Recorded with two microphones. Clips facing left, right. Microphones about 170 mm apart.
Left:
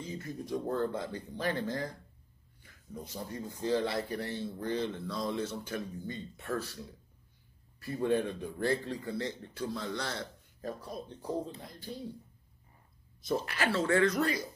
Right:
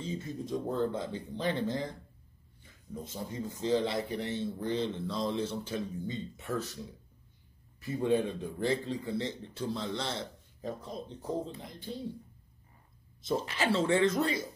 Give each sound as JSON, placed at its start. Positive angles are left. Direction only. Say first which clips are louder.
{"t": 0.0, "sound": "a man's voice", "louder": "right 3 dB", "side_deg": -25}
{"t": 7.8, "sound": "a man's voice", "louder": "right 1 dB", "side_deg": -15}
{"t": 13.2, "sound": "a man's voice", "louder": "right 1 dB", "side_deg": -25}